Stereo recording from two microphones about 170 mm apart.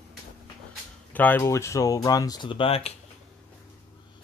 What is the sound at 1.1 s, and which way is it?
Speech, 10° left (ahead or behind).